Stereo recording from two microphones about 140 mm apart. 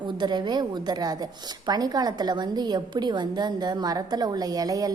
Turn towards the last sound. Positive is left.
turn(degrees=-25)  # may be behind; listen again after turning